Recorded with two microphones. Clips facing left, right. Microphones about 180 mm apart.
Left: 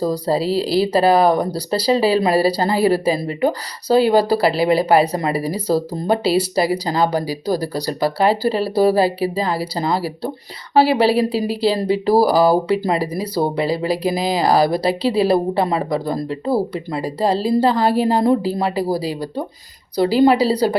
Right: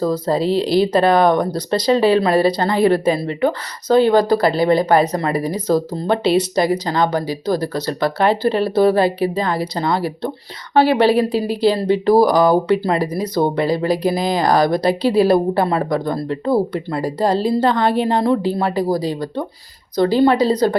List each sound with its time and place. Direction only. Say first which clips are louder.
0.0 s speech: right 1 dB; 10° left (ahead or behind)